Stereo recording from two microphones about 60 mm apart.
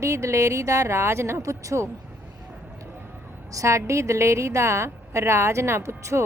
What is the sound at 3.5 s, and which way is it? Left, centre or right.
A woman's voice, right.